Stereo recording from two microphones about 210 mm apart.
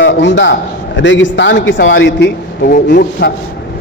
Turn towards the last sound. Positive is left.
turn(degrees=45)  # may be behind; listen again after turning